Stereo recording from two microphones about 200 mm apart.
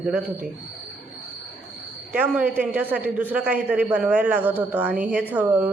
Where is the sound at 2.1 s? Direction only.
5° right (ahead or behind).